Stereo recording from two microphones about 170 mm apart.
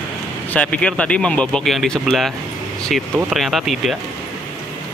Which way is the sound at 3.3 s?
Centre (ahead or behind).